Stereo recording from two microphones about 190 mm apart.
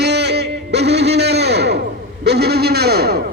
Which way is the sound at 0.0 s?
60° right (ahead or behind).